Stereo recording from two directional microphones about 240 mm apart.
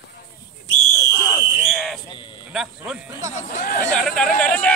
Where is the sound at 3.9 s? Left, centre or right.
Centre.